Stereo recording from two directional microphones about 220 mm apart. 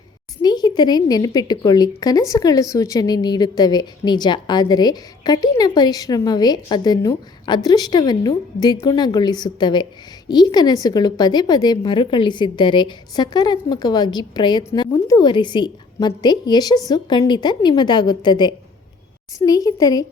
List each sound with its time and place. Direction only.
0.4 s a woman's voice: 20° left (ahead or behind)